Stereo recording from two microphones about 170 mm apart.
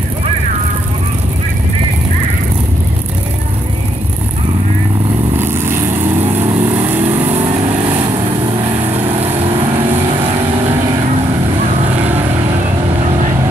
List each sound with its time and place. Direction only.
5.4 s vehicle: 15° right (ahead or behind)
7.3 s vehicle: 35° right (ahead or behind)
8.9 s vehicle: 35° right (ahead or behind)
11.9 s vehicle: 10° right (ahead or behind)